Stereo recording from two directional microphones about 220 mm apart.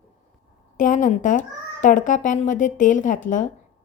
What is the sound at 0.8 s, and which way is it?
A woman's voice, 35° left (ahead or behind).